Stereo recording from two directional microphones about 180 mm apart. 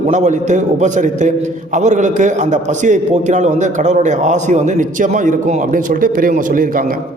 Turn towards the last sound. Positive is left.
turn(degrees=-50)  # may be behind; listen again after turning